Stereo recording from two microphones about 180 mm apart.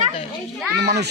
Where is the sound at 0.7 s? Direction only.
70° right (ahead or behind).